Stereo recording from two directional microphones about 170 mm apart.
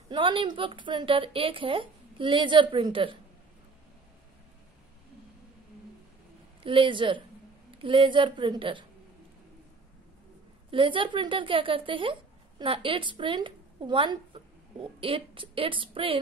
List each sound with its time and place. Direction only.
0.1 s a woman's voice: 30° right (ahead or behind)
6.6 s a woman's voice: 30° right (ahead or behind)
10.7 s speech: 30° right (ahead or behind)